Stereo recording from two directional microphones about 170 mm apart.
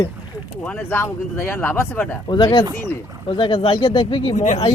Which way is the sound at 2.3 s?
25° left (ahead or behind).